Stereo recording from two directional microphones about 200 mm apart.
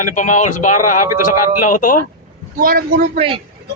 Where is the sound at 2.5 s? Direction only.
45° right (ahead or behind).